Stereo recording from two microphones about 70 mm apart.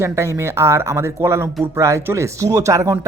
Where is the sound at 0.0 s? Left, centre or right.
Right.